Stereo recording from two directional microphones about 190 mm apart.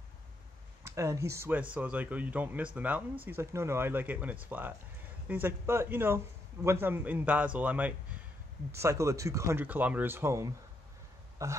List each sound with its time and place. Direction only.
0.8 s a man's voice: 15° right (ahead or behind)